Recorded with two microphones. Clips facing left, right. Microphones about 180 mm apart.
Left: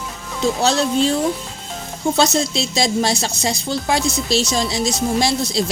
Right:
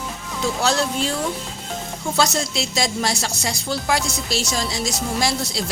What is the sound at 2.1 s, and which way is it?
A woman's voice, 25° left (ahead or behind).